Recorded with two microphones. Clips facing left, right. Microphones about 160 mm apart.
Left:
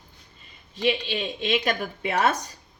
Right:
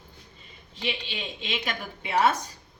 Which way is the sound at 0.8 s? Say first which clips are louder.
Left 8 dB; 50° left (ahead or behind).